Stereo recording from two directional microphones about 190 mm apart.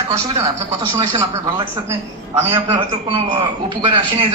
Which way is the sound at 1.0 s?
25° right (ahead or behind).